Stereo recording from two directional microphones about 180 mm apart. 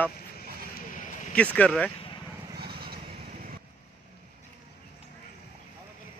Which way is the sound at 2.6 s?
60° right (ahead or behind).